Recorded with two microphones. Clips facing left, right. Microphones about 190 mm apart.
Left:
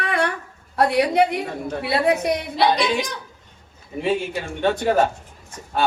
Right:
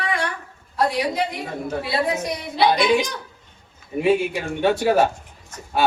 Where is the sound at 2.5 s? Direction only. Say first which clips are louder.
Right 4 dB; centre (ahead or behind).